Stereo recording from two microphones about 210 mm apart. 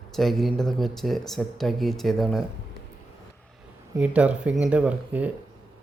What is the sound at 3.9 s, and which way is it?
Speech, 5° right (ahead or behind).